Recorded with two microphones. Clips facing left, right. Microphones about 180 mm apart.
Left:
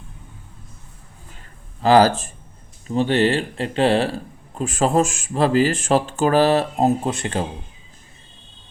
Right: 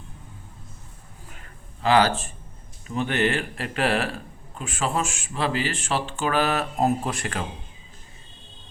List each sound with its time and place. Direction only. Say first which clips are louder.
1.8 s speech: left 6 dB; 40° left (ahead or behind)
4.5 s speech: left 9 dB; 40° left (ahead or behind)